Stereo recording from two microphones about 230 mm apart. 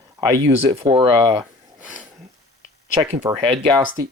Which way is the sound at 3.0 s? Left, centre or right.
Right.